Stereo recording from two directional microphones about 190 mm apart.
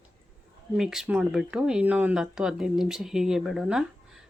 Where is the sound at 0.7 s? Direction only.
Centre (ahead or behind).